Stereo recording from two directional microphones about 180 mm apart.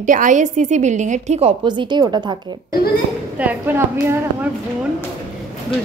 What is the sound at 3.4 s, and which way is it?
A woman's voice, 10° right (ahead or behind).